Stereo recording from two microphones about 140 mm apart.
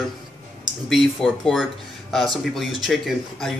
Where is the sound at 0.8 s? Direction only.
Centre (ahead or behind).